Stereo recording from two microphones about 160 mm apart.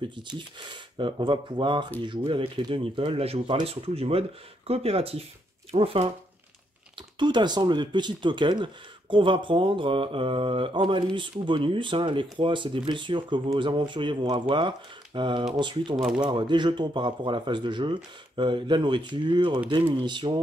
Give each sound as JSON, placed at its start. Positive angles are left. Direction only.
{"t": 0.9, "sound": "speech", "side_deg": -30}
{"t": 7.2, "sound": "speech", "side_deg": -30}